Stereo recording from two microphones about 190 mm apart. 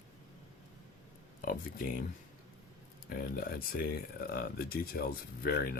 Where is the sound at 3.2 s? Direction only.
50° left (ahead or behind).